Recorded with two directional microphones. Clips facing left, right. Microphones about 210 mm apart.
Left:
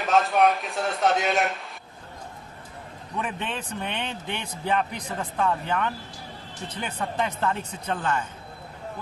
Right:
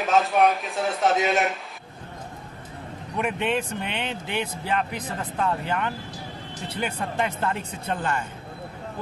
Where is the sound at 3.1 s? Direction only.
10° right (ahead or behind).